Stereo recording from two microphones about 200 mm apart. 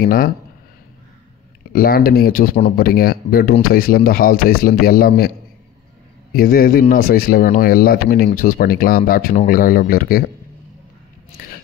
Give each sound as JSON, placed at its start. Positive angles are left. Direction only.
{"t": 0.0, "sound": "speech", "side_deg": 45}
{"t": 1.7, "sound": "speech", "side_deg": 45}
{"t": 6.3, "sound": "speech", "side_deg": 45}